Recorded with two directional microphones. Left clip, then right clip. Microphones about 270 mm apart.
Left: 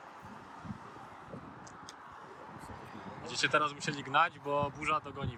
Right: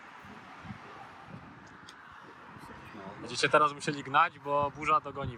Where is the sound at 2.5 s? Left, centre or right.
Left.